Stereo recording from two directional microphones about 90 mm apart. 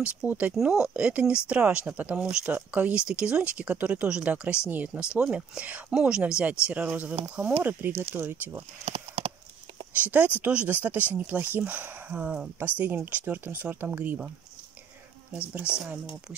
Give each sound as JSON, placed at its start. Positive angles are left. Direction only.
{"t": 0.0, "sound": "speech", "side_deg": -15}
{"t": 9.9, "sound": "speech", "side_deg": -15}
{"t": 15.3, "sound": "speech", "side_deg": -10}